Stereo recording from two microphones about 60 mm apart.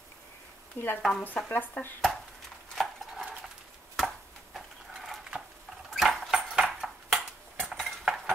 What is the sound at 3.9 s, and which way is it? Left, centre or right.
Chopping, centre.